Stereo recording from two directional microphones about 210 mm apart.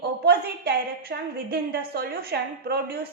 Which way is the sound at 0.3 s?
45° right (ahead or behind).